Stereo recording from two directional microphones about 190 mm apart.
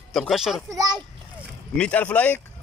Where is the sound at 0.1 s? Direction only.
Centre (ahead or behind).